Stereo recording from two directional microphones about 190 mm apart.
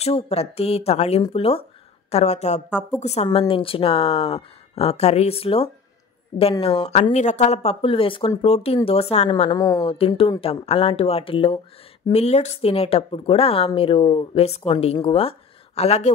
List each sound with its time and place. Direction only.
0.0 s speech: 30° left (ahead or behind)
6.9 s speech: 35° left (ahead or behind)
9.3 s speech: 20° left (ahead or behind)